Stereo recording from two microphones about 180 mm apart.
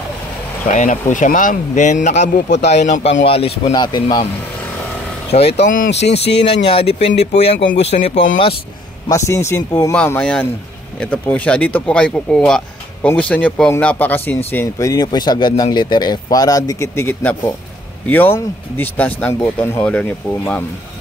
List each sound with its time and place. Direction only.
0.7 s speech: 45° left (ahead or behind)
2.2 s a man's voice: 70° left (ahead or behind)
2.7 s speech: 40° left (ahead or behind); by 4.3 s 25° left (ahead or behind)
5.6 s speech: 50° left (ahead or behind)
5.9 s a man's voice: 75° left (ahead or behind)
6.6 s speech: 30° left (ahead or behind)
9.1 s speech: 15° left (ahead or behind)